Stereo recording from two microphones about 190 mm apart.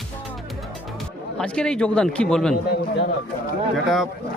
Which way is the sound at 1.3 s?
5° left (ahead or behind).